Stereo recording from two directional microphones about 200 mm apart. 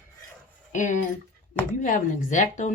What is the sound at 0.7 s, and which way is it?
Speech, 40° left (ahead or behind).